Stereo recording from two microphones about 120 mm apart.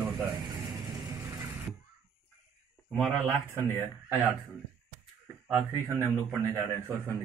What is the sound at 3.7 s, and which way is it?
Speech, 15° right (ahead or behind).